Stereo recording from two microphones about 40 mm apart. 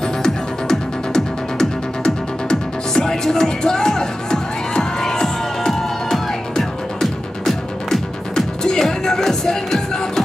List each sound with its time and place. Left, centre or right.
0.2 s music: centre